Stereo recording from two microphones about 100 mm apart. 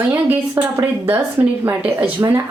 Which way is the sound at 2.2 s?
30° right (ahead or behind).